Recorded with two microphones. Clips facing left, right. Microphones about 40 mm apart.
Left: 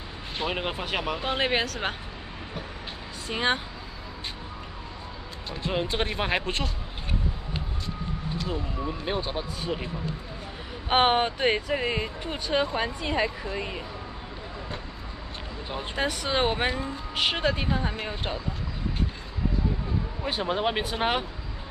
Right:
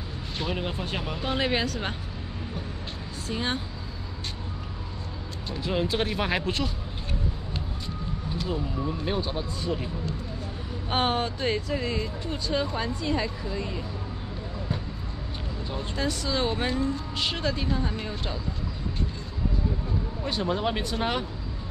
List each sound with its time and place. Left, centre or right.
0.5 s speech: left
3.3 s speech: left
5.7 s speech: centre
8.5 s speech: centre
10.9 s speech: left
15.7 s speech: left
16.7 s speech: centre
20.2 s speech: left